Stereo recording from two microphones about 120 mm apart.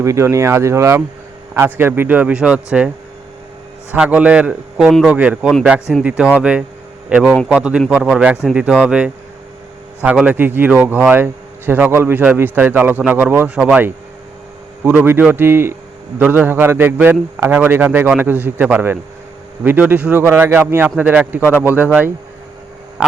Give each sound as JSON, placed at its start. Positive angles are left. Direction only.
{"t": 0.0, "sound": "a man's voice", "side_deg": -25}
{"t": 3.9, "sound": "a man's voice", "side_deg": -10}
{"t": 4.9, "sound": "a man's voice", "side_deg": 5}
{"t": 5.1, "sound": "a man's voice", "side_deg": -10}